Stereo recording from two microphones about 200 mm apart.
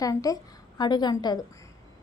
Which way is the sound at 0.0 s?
15° left (ahead or behind).